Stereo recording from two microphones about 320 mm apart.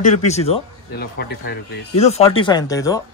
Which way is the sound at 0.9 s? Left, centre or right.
Left.